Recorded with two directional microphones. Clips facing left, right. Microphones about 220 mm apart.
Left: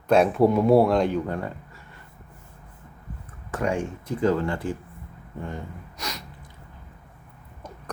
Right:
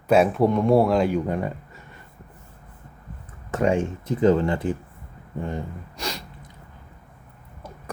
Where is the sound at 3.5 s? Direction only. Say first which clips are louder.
Right 4 dB; 25° right (ahead or behind).